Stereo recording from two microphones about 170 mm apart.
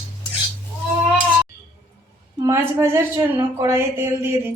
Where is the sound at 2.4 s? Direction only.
15° right (ahead or behind).